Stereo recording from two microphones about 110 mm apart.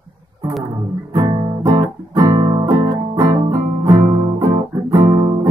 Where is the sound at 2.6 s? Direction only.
35° right (ahead or behind).